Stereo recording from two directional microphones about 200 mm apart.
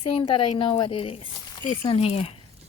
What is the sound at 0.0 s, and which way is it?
A woman's voice, 25° left (ahead or behind).